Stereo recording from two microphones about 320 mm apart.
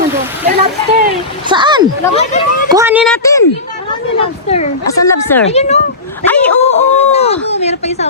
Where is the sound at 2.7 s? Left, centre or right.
Centre.